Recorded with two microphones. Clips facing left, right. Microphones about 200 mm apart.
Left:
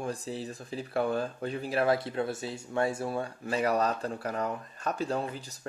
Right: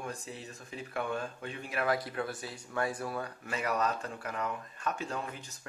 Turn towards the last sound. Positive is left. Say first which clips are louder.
# left 5 dB
turn(degrees=35)  # may be behind; listen again after turning